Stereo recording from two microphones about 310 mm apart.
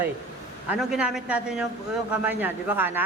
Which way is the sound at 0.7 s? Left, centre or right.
Centre.